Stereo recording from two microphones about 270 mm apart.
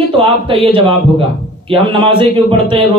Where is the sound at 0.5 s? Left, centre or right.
Centre.